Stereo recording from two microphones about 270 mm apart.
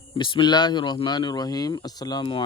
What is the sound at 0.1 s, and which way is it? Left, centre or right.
Speech, centre.